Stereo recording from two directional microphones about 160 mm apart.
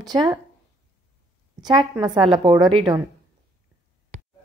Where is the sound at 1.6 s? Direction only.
25° right (ahead or behind).